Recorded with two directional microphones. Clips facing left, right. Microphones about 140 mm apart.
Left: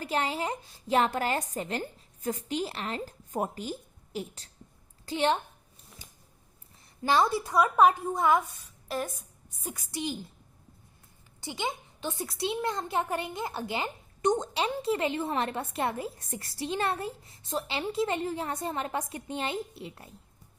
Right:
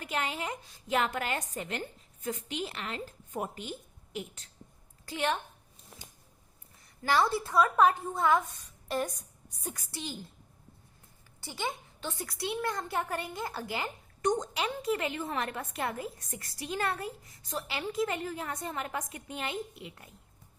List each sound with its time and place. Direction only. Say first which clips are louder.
0.0 s a woman's voice: left 4 dB; 35° left (ahead or behind)
7.0 s a woman's voice: left 2 dB; 20° left (ahead or behind)
8.9 s a woman's voice: right 1 dB; centre (ahead or behind)
9.6 s a woman's voice: left 5 dB; 15° left (ahead or behind)
11.3 s a child's voice: left 2 dB; 20° left (ahead or behind)